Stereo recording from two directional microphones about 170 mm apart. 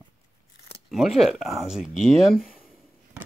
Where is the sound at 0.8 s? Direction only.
Centre (ahead or behind).